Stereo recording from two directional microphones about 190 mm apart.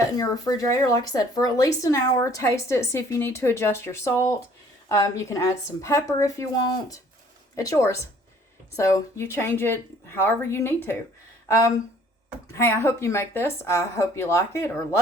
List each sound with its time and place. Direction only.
0.2 s speech: 20° left (ahead or behind)